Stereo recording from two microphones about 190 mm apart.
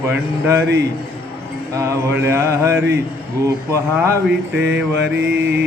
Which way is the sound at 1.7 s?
15° right (ahead or behind).